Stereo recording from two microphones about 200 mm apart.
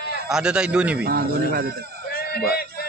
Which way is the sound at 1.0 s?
50° right (ahead or behind).